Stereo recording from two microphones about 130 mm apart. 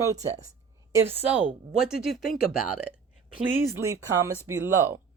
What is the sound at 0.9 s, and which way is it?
Speech, 15° right (ahead or behind).